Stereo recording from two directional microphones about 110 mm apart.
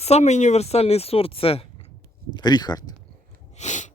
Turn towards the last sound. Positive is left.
turn(degrees=90)